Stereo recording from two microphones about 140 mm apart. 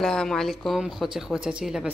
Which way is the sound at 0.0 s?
5° left (ahead or behind).